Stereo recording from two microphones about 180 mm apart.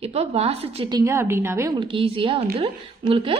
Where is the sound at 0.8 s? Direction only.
20° right (ahead or behind).